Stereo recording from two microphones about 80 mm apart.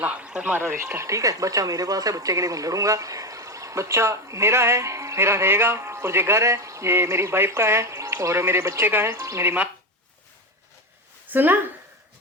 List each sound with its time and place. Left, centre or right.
0.0 s a man's voice: centre
0.6 s speech: right
9.1 s speech: right
11.3 s speech: right